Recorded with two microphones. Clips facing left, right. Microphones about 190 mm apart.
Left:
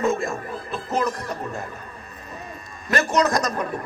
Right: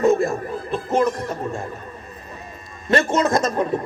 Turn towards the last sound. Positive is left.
turn(degrees=-25)  # may be behind; listen again after turning